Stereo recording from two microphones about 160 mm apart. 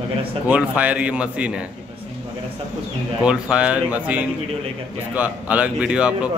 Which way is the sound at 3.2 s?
5° right (ahead or behind).